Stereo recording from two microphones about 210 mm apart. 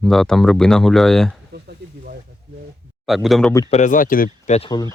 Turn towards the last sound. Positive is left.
turn(degrees=20)  # may be behind; listen again after turning